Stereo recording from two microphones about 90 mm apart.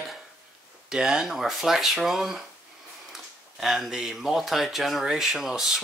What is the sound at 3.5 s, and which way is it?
Speech, centre (ahead or behind).